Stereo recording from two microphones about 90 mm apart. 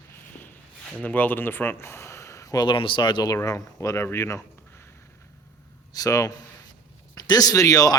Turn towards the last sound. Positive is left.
turn(degrees=45)  # may be behind; listen again after turning